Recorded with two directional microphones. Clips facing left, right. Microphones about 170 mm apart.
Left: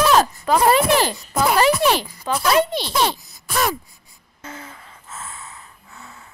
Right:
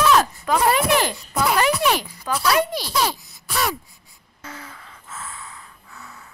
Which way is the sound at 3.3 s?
45° left (ahead or behind).